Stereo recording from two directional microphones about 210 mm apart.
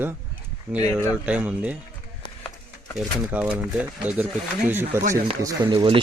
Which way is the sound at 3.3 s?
5° right (ahead or behind).